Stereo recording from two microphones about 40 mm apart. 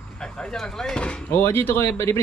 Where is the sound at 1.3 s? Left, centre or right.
Left.